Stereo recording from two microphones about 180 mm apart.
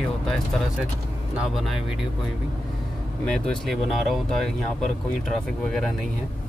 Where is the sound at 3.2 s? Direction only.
5° left (ahead or behind).